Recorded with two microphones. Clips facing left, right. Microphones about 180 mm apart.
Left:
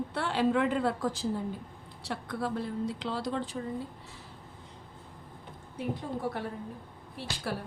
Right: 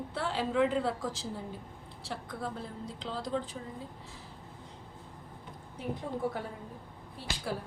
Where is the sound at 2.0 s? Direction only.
70° left (ahead or behind).